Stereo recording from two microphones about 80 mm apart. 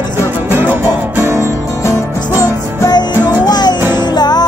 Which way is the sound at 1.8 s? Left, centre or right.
Left.